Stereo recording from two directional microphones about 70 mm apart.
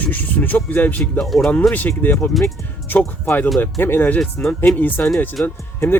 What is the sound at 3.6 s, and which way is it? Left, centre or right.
Speech, left.